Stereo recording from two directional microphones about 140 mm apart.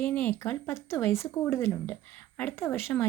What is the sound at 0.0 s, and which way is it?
Speech, 15° left (ahead or behind).